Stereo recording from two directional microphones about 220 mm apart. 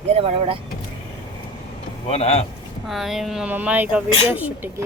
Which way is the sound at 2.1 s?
30° left (ahead or behind).